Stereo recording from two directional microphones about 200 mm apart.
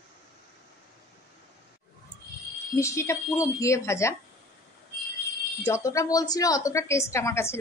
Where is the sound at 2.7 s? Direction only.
15° left (ahead or behind).